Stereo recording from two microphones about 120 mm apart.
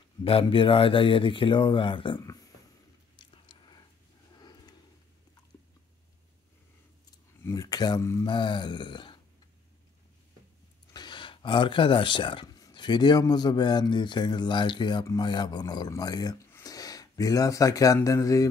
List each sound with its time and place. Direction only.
0.2 s speech: 50° left (ahead or behind)
3.2 s biting: 40° left (ahead or behind)
4.4 s a sound: 35° left (ahead or behind)
7.4 s speech: 30° left (ahead or behind)
8.3 s a man's voice: 40° left (ahead or behind)
10.9 s a man's voice: 40° left (ahead or behind)